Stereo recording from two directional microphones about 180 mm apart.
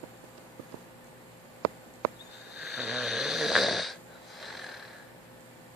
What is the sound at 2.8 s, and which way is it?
Snoring, centre (ahead or behind).